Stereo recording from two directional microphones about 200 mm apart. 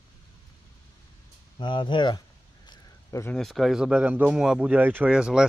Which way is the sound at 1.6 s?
25° left (ahead or behind).